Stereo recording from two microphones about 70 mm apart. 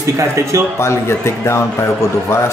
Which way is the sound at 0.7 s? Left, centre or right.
Left.